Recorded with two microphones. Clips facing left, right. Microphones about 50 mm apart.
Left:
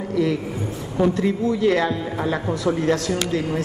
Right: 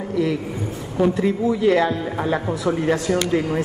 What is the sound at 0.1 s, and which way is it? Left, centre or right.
A man's voice, centre.